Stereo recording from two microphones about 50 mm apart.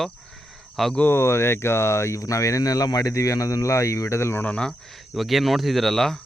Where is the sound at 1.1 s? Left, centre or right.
Left.